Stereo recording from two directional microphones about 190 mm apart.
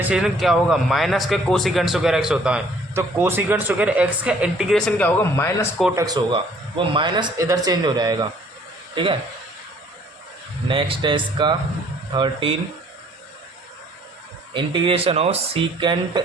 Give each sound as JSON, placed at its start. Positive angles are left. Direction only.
{"t": 0.1, "sound": "a man's voice", "side_deg": 0}
{"t": 6.0, "sound": "speech", "side_deg": -20}
{"t": 10.7, "sound": "speech", "side_deg": -25}
{"t": 14.5, "sound": "speech", "side_deg": -25}